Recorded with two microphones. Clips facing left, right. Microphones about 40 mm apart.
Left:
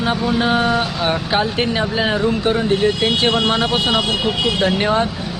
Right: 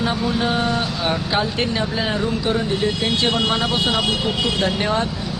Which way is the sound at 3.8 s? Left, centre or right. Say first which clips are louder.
Left 2 dB; left.